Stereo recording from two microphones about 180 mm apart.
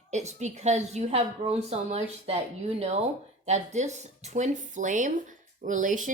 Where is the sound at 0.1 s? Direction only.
40° right (ahead or behind).